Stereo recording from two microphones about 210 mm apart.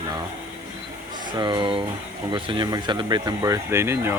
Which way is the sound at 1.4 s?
20° right (ahead or behind).